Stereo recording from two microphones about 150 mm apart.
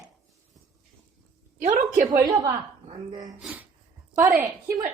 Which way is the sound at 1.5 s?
55° right (ahead or behind).